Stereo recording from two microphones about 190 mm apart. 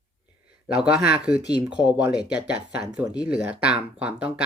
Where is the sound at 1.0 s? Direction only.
5° right (ahead or behind).